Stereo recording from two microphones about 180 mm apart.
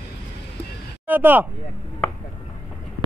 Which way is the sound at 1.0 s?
10° right (ahead or behind).